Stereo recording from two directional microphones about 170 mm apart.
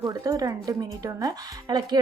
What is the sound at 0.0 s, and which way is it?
Speech, 20° right (ahead or behind).